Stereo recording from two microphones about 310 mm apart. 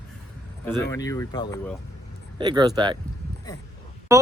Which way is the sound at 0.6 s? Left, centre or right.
Centre.